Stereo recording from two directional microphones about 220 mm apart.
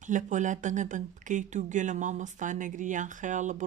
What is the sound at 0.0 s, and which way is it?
A woman's voice, 35° right (ahead or behind).